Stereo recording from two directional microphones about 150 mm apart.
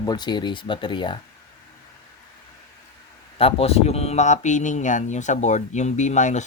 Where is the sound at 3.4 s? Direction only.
40° left (ahead or behind).